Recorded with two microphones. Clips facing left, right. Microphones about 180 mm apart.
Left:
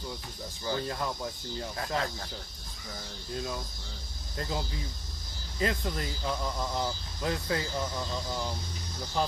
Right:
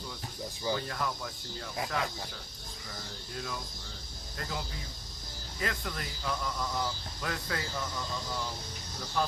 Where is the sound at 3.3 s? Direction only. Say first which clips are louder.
Left 4 dB; 25° left (ahead or behind).